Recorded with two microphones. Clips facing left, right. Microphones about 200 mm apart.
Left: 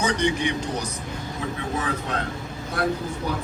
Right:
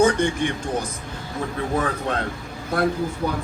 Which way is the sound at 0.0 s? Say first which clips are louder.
Right 4 dB; 50° right (ahead or behind).